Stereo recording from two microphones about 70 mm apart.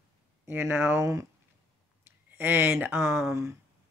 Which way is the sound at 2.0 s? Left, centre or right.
Right.